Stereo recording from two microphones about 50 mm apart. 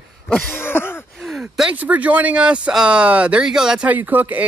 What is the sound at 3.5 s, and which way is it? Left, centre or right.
Speech, centre.